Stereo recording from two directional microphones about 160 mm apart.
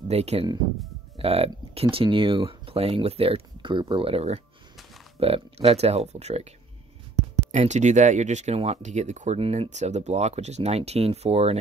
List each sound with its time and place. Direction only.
0.1 s speech: 40° right (ahead or behind)
7.5 s speech: 50° right (ahead or behind)